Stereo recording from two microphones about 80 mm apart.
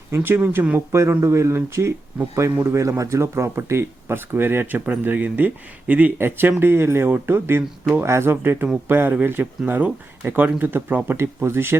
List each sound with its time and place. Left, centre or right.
0.2 s speech: right
1.2 s speech: right